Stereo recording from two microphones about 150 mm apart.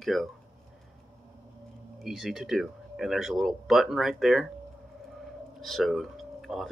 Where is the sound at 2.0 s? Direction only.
Centre (ahead or behind).